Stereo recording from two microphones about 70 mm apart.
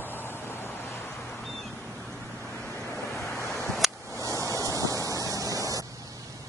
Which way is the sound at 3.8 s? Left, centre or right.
Centre.